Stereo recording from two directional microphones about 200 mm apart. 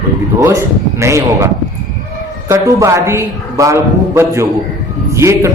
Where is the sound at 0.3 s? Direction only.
15° right (ahead or behind).